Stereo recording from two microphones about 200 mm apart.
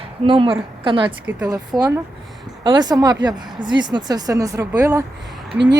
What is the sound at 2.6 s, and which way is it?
Speech, 20° right (ahead or behind).